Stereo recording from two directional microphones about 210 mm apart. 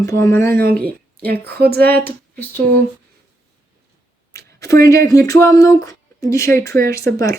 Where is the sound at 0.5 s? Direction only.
45° right (ahead or behind).